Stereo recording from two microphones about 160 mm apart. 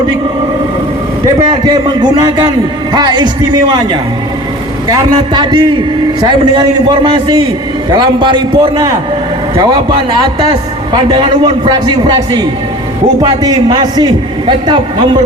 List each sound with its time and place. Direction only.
1.4 s a man's voice: 25° right (ahead or behind)
5.3 s a man's voice: 30° right (ahead or behind)